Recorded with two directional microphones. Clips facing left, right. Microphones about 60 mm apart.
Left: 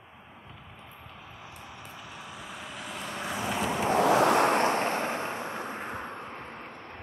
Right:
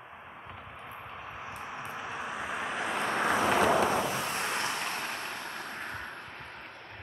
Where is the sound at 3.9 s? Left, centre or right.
Left.